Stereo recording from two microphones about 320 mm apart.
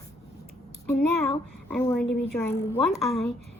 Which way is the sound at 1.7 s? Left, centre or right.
Centre.